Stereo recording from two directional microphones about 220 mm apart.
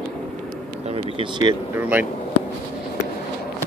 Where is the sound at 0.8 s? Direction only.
25° right (ahead or behind).